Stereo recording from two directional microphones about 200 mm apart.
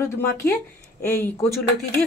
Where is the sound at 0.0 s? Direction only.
15° left (ahead or behind).